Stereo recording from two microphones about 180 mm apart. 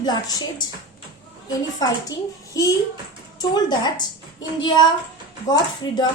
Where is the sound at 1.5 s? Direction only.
20° left (ahead or behind).